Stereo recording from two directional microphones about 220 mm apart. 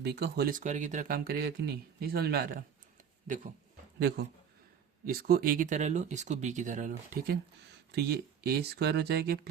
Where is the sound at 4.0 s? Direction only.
50° right (ahead or behind).